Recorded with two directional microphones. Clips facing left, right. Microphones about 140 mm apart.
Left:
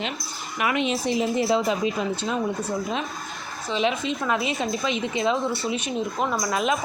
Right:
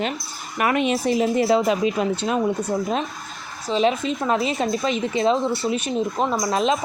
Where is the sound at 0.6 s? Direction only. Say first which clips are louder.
Right 4 dB; 45° right (ahead or behind).